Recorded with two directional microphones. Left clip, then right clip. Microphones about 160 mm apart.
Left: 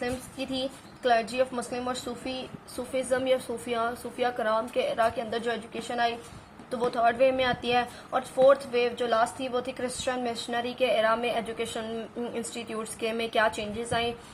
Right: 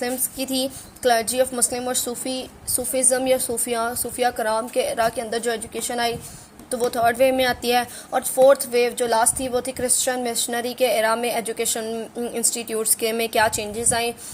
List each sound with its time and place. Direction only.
0.0 s speech: 40° right (ahead or behind)